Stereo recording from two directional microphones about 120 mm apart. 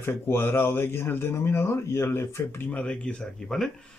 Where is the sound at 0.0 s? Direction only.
20° left (ahead or behind).